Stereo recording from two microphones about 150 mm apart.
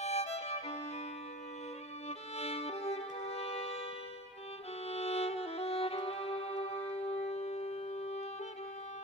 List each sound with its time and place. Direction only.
0.0 s violin: 45° left (ahead or behind)
2.0 s music: 45° left (ahead or behind)
4.8 s violin: 45° left (ahead or behind)